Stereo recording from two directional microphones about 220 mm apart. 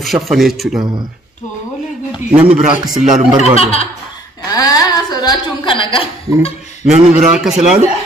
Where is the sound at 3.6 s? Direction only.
25° left (ahead or behind).